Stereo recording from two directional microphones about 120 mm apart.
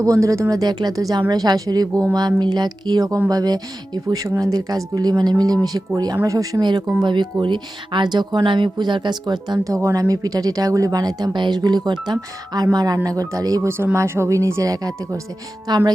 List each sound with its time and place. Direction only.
0.0 s speech: 25° right (ahead or behind)